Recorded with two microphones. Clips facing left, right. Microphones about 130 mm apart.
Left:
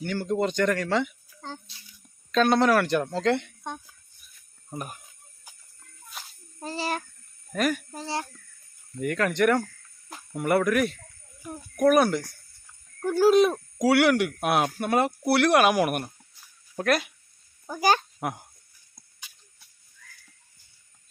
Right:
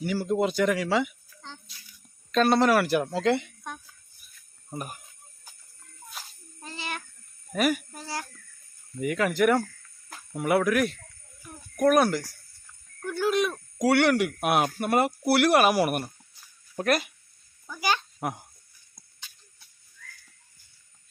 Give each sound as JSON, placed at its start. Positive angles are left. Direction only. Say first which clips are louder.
{"t": 0.0, "sound": "speech", "louder": "right 1 dB", "side_deg": -5}
{"t": 1.4, "sound": "speech", "louder": "left 6 dB", "side_deg": 40}
{"t": 2.3, "sound": "speech", "louder": "even", "side_deg": 0}
{"t": 4.7, "sound": "speech", "louder": "even", "side_deg": -5}
{"t": 5.5, "sound": "music", "louder": "left 1 dB", "side_deg": 15}
{"t": 6.2, "sound": "a sound", "louder": "left 1 dB", "side_deg": 0}
{"t": 6.6, "sound": "a child's voice", "louder": "left 7 dB", "side_deg": 35}
{"t": 7.5, "sound": "speech", "louder": "right 1 dB", "side_deg": -5}
{"t": 7.9, "sound": "speech", "louder": "left 4 dB", "side_deg": 25}
{"t": 9.0, "sound": "speech", "louder": "even", "side_deg": -5}
{"t": 13.0, "sound": "a sound", "louder": "left 7 dB", "side_deg": 35}
{"t": 13.7, "sound": "speech", "louder": "even", "side_deg": 0}
{"t": 17.7, "sound": "speech", "louder": "left 5 dB", "side_deg": 45}
{"t": 18.2, "sound": "speech", "louder": "even", "side_deg": 0}